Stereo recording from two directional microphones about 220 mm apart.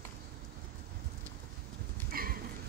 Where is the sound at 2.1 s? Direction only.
40° right (ahead or behind).